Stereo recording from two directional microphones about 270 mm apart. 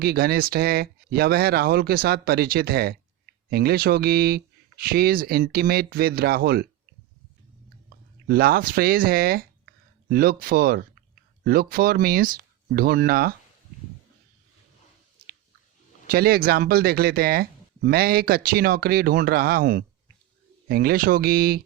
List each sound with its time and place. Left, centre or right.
0.0 s speech: right
8.3 s speech: right
16.0 s speech: right